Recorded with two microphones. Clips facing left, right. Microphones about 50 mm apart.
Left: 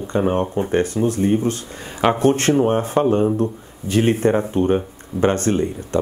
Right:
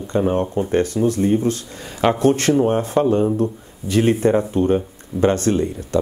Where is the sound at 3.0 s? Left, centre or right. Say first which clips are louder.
Even; centre.